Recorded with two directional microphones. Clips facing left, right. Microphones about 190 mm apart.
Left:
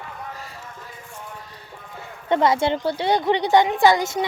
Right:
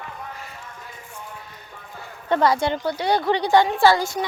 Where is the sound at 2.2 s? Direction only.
20° left (ahead or behind).